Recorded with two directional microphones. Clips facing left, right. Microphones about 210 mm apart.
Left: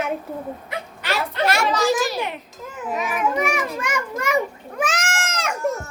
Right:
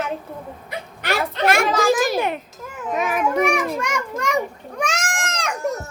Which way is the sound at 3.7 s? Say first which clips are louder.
Right 1 dB; centre (ahead or behind).